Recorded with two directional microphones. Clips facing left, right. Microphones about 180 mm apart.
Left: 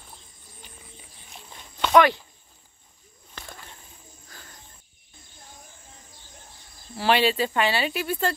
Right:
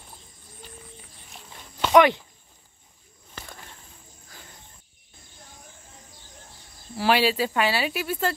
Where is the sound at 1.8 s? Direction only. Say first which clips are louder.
Right 1 dB; 15° right (ahead or behind).